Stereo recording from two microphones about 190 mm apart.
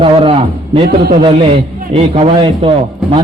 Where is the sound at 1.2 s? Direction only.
30° right (ahead or behind).